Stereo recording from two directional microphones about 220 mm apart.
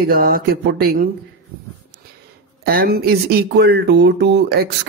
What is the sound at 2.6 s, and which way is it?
Speech, 40° right (ahead or behind).